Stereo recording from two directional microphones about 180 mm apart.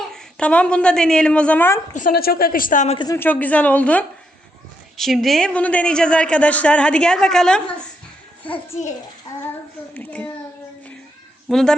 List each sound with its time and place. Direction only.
0.1 s a woman's voice: 5° left (ahead or behind)
2.0 s speech: 55° left (ahead or behind)
3.0 s a woman's voice: 15° left (ahead or behind)
9.9 s a sound: 10° left (ahead or behind)
11.4 s speech: centre (ahead or behind)